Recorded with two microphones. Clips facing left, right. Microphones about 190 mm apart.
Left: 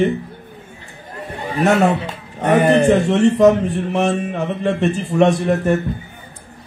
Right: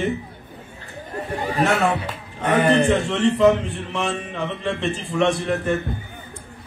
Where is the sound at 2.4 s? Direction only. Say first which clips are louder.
Left 4 dB; 40° left (ahead or behind).